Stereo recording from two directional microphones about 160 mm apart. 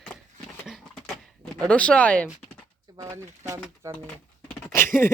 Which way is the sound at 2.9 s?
20° right (ahead or behind).